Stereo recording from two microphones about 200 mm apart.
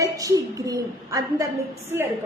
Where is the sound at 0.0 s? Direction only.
15° right (ahead or behind).